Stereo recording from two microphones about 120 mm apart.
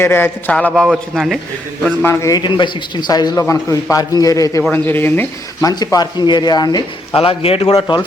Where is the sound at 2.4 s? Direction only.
40° left (ahead or behind).